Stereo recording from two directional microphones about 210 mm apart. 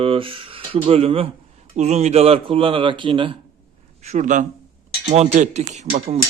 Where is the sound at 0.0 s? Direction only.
25° right (ahead or behind).